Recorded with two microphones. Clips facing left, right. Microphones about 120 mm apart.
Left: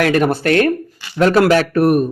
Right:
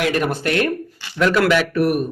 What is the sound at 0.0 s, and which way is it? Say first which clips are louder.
A man's voice: left 5 dB; 50° left (ahead or behind).